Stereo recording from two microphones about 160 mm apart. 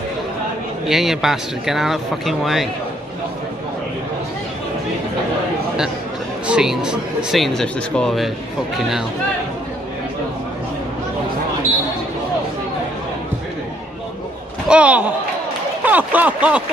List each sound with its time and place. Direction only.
0.8 s speech: centre (ahead or behind)
6.4 s speech: 5° right (ahead or behind)
14.7 s speech: 10° right (ahead or behind)